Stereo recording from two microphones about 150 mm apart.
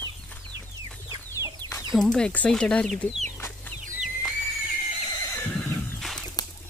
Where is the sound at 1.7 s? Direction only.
20° left (ahead or behind).